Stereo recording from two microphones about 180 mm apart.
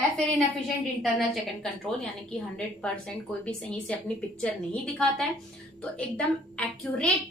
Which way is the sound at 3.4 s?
5° left (ahead or behind).